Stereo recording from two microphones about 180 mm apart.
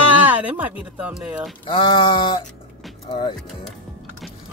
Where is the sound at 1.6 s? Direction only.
25° left (ahead or behind).